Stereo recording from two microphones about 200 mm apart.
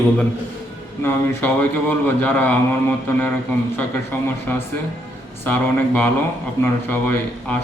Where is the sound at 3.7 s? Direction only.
10° left (ahead or behind).